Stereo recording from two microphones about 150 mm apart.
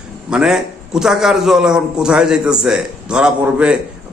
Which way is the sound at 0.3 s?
5° right (ahead or behind).